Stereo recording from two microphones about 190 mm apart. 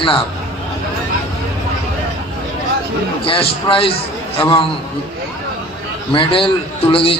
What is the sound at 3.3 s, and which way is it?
A man's voice, 30° left (ahead or behind).